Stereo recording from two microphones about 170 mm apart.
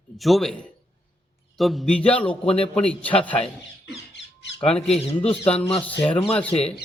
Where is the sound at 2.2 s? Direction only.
35° left (ahead or behind).